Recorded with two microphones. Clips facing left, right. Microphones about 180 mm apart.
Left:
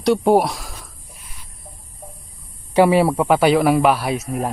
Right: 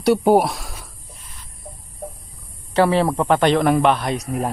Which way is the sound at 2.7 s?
10° left (ahead or behind).